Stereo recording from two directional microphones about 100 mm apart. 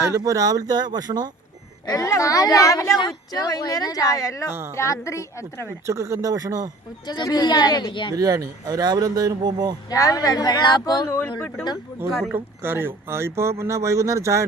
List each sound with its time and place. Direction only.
0.3 s speech: 35° right (ahead or behind)
1.9 s a woman's voice: 35° left (ahead or behind)
5.8 s speech: 30° right (ahead or behind)
7.1 s a woman's voice: 45° left (ahead or behind)
8.1 s speech: 40° right (ahead or behind)
9.9 s speech: 35° left (ahead or behind)
11.3 s speech: 10° left (ahead or behind)
12.3 s speech: 20° right (ahead or behind)